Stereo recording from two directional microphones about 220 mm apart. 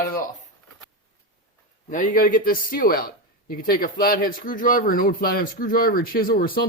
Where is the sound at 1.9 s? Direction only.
40° left (ahead or behind).